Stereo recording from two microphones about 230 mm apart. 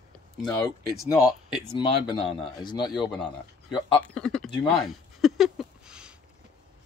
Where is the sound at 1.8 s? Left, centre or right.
Left.